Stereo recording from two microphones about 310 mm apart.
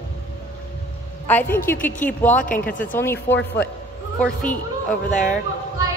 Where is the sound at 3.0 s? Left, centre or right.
Centre.